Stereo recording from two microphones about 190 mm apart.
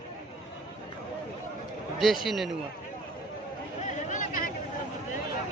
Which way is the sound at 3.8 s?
40° left (ahead or behind).